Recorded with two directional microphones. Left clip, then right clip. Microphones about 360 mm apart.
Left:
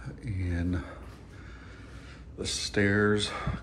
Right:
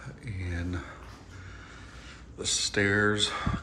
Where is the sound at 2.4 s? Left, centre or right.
Centre.